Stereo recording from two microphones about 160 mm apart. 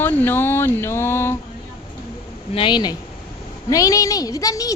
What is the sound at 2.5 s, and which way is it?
Speech, 30° left (ahead or behind).